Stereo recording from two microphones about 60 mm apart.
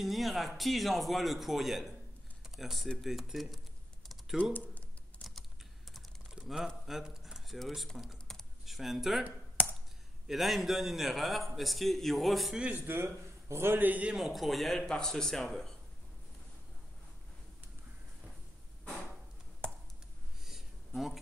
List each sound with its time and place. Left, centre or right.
0.0 s a man's voice: centre
6.3 s a sound: centre
7.5 s a man's voice: centre
8.3 s computer keyboard: centre
10.2 s a man's voice: centre
12.7 s a man's voice: right
13.7 s a man's voice: right
14.1 s a man's voice: centre
14.8 s speech: centre
20.4 s a sound: centre